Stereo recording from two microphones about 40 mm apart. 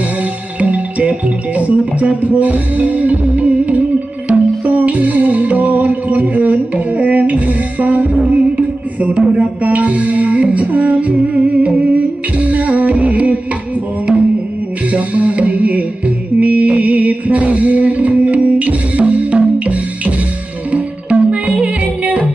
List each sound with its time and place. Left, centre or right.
0.6 s music: right
14.9 s music: right